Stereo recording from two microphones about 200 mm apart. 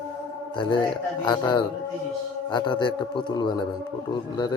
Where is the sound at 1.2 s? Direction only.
20° left (ahead or behind).